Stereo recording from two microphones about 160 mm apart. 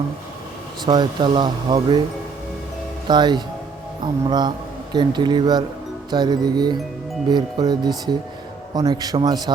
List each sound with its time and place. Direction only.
0.9 s a man's voice: 30° right (ahead or behind)
3.1 s a man's voice: 25° right (ahead or behind)